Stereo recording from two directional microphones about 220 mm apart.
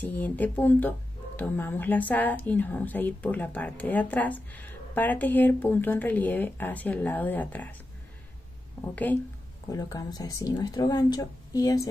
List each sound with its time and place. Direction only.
0.0 s speech: 5° left (ahead or behind)
8.9 s speech: 10° left (ahead or behind)